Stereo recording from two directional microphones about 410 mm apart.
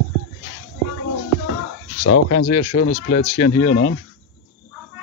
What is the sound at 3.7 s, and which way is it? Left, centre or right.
Speech, left.